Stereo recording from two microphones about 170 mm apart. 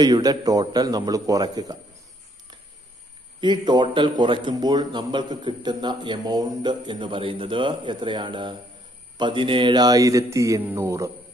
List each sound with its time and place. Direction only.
0.0 s a man's voice: 20° right (ahead or behind)
3.3 s a man's voice: 25° right (ahead or behind)